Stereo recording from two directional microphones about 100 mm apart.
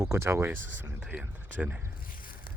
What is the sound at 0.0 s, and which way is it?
Speech, 30° right (ahead or behind).